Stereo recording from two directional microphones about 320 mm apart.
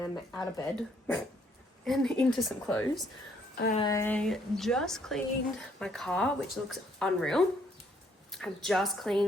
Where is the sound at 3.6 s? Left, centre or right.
Left.